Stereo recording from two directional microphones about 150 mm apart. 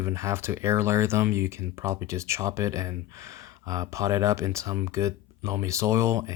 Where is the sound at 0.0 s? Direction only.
20° right (ahead or behind).